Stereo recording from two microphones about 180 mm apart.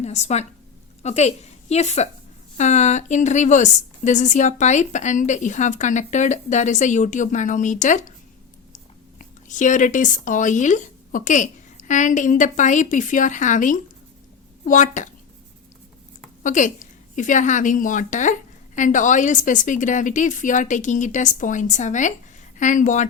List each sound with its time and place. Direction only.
0.0 s a woman's voice: 40° left (ahead or behind)
16.4 s a woman's voice: 45° left (ahead or behind)